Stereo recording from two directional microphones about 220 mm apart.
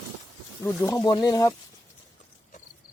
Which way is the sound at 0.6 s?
15° left (ahead or behind).